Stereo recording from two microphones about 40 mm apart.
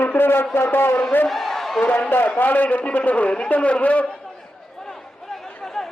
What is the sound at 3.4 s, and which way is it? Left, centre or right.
Speech, left.